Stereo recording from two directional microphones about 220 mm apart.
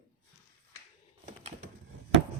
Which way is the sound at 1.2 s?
35° right (ahead or behind).